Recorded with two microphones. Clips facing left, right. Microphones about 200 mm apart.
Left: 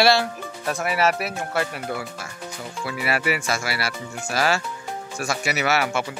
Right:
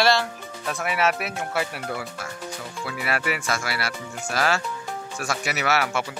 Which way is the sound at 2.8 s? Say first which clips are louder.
Left 3 dB; 5° left (ahead or behind).